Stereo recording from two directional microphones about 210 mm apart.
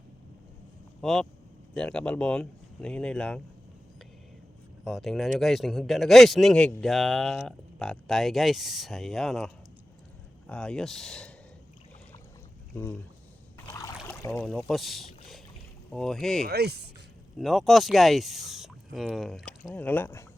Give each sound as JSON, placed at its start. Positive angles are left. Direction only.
{"t": 1.0, "sound": "speech", "side_deg": 0}
{"t": 4.8, "sound": "speech", "side_deg": 0}
{"t": 12.7, "sound": "speech", "side_deg": 10}
{"t": 13.7, "sound": "boat", "side_deg": 15}
{"t": 14.4, "sound": "speech", "side_deg": 0}
{"t": 16.5, "sound": "speech", "side_deg": -50}
{"t": 17.3, "sound": "speech", "side_deg": 0}